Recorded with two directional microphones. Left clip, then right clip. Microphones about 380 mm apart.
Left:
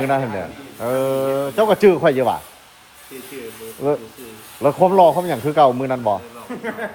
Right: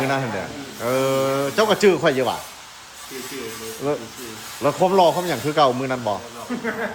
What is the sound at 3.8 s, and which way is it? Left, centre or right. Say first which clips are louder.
Speech: left 5 dB; centre.